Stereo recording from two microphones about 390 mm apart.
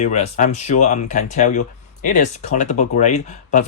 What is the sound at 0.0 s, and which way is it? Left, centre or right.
Speech, centre.